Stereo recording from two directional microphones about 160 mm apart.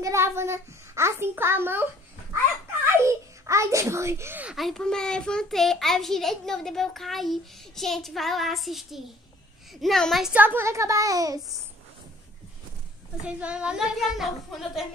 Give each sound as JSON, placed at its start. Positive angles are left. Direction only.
{"t": 0.0, "sound": "child singing", "side_deg": -15}
{"t": 1.2, "sound": "a child's voice", "side_deg": -15}
{"t": 3.0, "sound": "a child's voice", "side_deg": -20}
{"t": 13.2, "sound": "a child's voice", "side_deg": -5}